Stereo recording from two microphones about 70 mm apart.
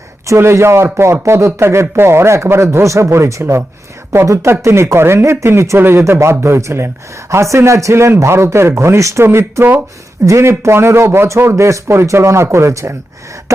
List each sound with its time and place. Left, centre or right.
0.3 s speech: right
4.6 s speech: right